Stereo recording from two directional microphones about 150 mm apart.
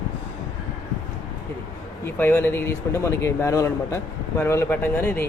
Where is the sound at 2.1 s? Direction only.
15° left (ahead or behind).